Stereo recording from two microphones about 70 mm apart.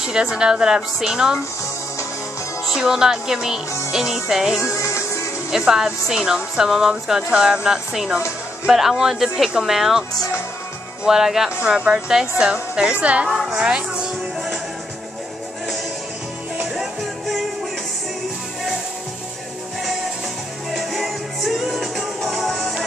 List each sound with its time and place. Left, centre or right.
0.0 s a woman's voice: centre
2.6 s a woman's voice: centre
4.7 s music: left
5.5 s a woman's voice: centre
11.1 s a woman's voice: centre
13.3 s speech: centre
13.6 s music: centre
16.7 s music: centre
20.7 s music: centre